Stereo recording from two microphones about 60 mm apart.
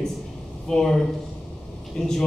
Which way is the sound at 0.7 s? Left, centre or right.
Centre.